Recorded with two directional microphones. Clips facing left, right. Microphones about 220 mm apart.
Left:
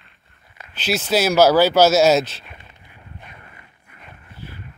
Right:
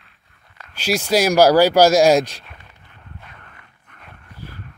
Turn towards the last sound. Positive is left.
turn(degrees=5)  # may be behind; listen again after turning